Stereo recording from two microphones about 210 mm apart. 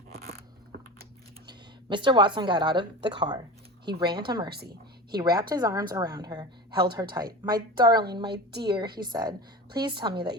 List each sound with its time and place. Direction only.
1.5 s a woman's voice: 20° right (ahead or behind)
4.4 s a woman's voice: 50° right (ahead or behind)
5.1 s a woman's voice: 20° right (ahead or behind)